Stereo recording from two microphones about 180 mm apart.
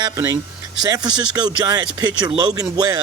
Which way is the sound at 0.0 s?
20° right (ahead or behind).